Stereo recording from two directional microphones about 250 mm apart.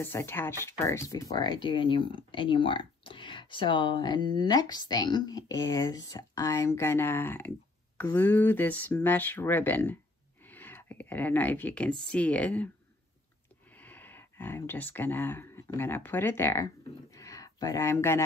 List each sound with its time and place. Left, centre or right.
0.0 s speech: centre
13.7 s speech: centre
17.1 s a sound: centre